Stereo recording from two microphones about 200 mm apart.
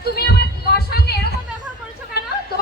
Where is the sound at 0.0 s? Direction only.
50° left (ahead or behind).